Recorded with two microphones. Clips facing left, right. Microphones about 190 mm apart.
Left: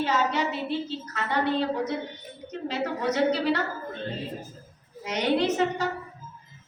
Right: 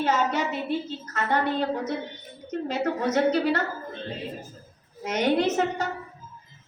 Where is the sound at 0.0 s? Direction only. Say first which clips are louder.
Right 1 dB; 45° right (ahead or behind).